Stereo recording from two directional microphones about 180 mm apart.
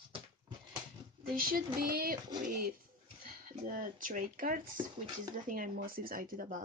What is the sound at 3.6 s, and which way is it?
Speech, 50° right (ahead or behind).